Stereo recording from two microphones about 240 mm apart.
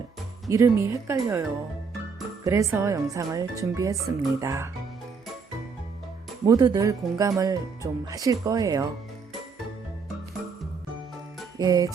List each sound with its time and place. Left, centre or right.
0.4 s speech: centre
6.4 s speech: centre
11.5 s speech: centre